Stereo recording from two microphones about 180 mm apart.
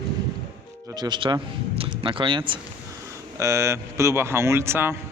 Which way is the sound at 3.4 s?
15° right (ahead or behind).